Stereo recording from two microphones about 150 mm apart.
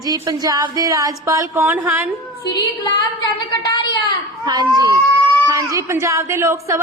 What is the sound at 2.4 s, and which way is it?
Speech, 30° left (ahead or behind).